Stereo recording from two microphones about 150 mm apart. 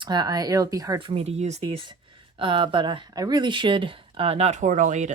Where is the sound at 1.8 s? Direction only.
35° right (ahead or behind); by 5.1 s 55° right (ahead or behind).